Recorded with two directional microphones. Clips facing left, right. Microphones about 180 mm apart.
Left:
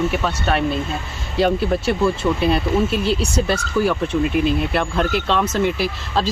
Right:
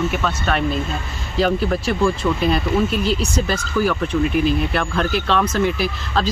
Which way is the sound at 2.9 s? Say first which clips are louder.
Left 1 dB; 30° left (ahead or behind).